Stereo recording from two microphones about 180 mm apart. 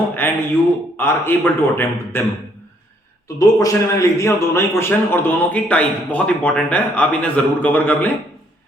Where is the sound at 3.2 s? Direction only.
20° left (ahead or behind).